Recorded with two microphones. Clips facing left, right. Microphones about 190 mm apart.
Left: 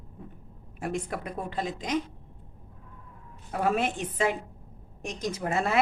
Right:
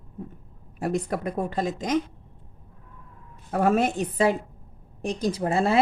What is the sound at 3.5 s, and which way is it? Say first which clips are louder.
Speech: right 5 dB; 45° right (ahead or behind).